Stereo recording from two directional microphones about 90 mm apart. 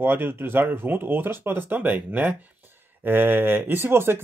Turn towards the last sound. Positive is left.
turn(degrees=-25)  # may be behind; listen again after turning